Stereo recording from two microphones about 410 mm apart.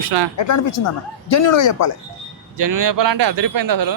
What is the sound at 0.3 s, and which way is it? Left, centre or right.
Speech, left.